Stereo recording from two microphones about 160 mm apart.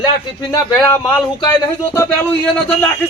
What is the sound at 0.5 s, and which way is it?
A man's voice, 15° left (ahead or behind).